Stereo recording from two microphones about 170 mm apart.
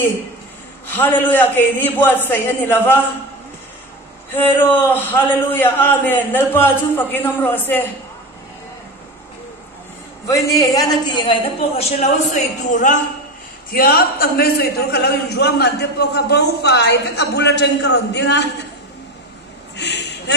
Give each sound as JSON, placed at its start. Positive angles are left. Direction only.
{"t": 0.8, "sound": "a man's voice", "side_deg": 10}
{"t": 4.3, "sound": "a man's voice", "side_deg": 10}
{"t": 10.2, "sound": "a woman's voice", "side_deg": 20}
{"t": 13.7, "sound": "a man's voice", "side_deg": 60}
{"t": 19.8, "sound": "a sound", "side_deg": 90}